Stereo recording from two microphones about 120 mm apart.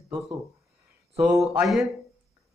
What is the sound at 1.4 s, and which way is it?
Speech, centre (ahead or behind).